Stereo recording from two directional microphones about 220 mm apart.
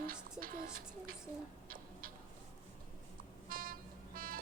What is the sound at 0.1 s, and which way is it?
Music, 40° right (ahead or behind).